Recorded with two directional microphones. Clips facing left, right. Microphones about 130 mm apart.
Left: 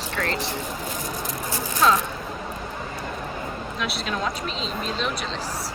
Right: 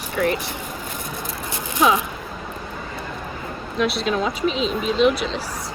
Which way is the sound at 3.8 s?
Centre (ahead or behind).